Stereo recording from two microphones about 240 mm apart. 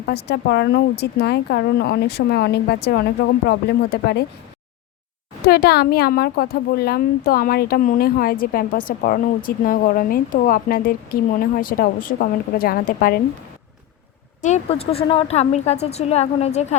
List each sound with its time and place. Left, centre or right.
0.0 s speech: left
5.5 s a woman's voice: left
14.4 s a woman's voice: left